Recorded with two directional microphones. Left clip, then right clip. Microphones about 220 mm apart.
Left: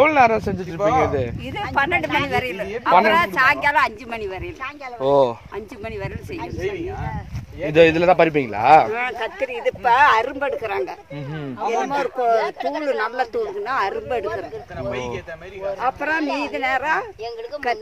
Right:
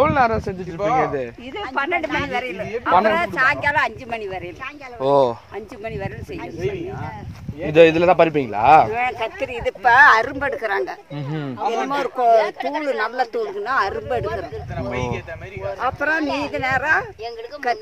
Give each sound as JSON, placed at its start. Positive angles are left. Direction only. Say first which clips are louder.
{"t": 0.0, "sound": "speech", "louder": "left 2 dB", "side_deg": 10}
{"t": 1.8, "sound": "speech", "louder": "left 2 dB", "side_deg": 45}
{"t": 3.7, "sound": "speech", "louder": "left 1 dB", "side_deg": 20}
{"t": 5.0, "sound": "speech", "louder": "even", "side_deg": -30}
{"t": 7.7, "sound": "speech", "louder": "right 1 dB", "side_deg": -20}
{"t": 8.9, "sound": "speech", "louder": "right 2 dB", "side_deg": 0}
{"t": 9.4, "sound": "speech", "louder": "even", "side_deg": -20}
{"t": 11.3, "sound": "a man's voice", "louder": "even", "side_deg": -40}
{"t": 13.0, "sound": "speech", "louder": "right 1 dB", "side_deg": -15}
{"t": 14.2, "sound": "a man's voice", "louder": "even", "side_deg": -30}
{"t": 16.0, "sound": "speech", "louder": "right 1 dB", "side_deg": -10}